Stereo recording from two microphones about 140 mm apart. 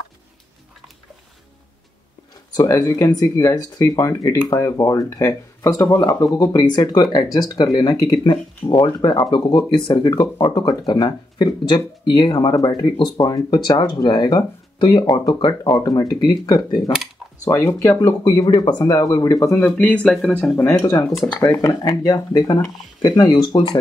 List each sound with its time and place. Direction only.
2.5 s speech: 25° left (ahead or behind)
19.6 s speech: 10° left (ahead or behind)
20.7 s speech: 25° left (ahead or behind)